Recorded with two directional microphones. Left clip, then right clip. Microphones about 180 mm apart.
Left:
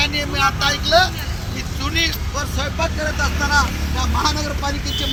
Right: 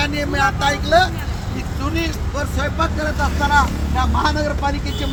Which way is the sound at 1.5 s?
50° right (ahead or behind).